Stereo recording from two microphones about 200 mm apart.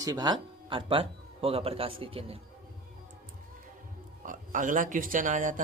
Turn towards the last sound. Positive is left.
turn(degrees=-40)  # may be behind; listen again after turning